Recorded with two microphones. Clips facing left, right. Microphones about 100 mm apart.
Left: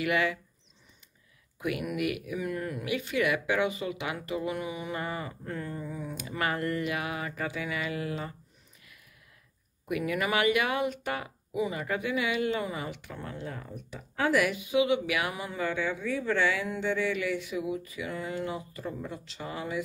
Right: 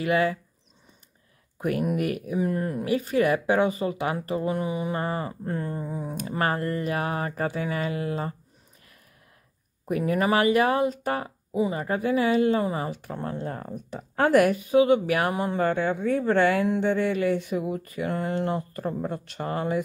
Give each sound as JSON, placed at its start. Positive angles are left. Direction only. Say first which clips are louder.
{"t": 0.0, "sound": "speech", "louder": "right 5 dB", "side_deg": -35}
{"t": 1.6, "sound": "speech", "louder": "right 5 dB", "side_deg": -40}
{"t": 9.8, "sound": "speech", "louder": "right 6 dB", "side_deg": -35}